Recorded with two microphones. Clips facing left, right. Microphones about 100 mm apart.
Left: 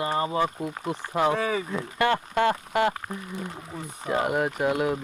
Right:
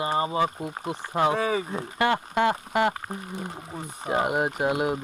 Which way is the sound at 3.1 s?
40° right (ahead or behind).